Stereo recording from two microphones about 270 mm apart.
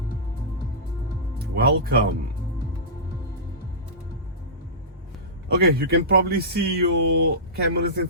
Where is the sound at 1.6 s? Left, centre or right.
Right.